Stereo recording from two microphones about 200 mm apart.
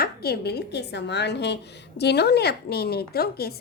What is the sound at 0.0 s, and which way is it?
A woman's voice, 50° left (ahead or behind).